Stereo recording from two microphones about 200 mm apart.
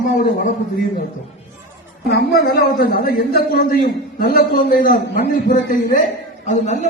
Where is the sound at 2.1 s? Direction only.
50° left (ahead or behind).